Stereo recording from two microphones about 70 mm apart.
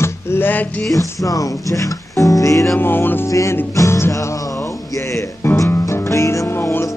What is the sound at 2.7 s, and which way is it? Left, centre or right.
Music, left.